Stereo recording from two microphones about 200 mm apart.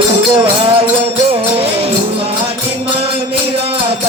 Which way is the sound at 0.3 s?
25° right (ahead or behind).